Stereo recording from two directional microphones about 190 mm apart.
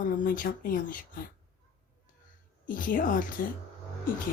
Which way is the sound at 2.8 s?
45° left (ahead or behind).